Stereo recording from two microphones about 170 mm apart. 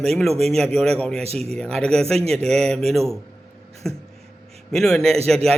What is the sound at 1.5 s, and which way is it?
A man's voice, 5° left (ahead or behind).